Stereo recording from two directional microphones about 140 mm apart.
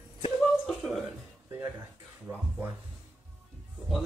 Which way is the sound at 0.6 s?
Centre (ahead or behind).